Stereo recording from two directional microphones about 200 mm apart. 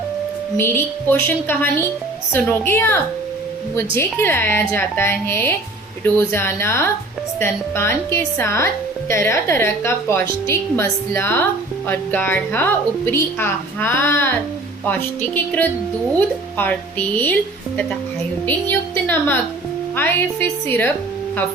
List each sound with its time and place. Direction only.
0.5 s a woman's voice: 10° left (ahead or behind)
16.1 s a woman's voice: 10° left (ahead or behind)
18.4 s a woman's voice: 10° left (ahead or behind)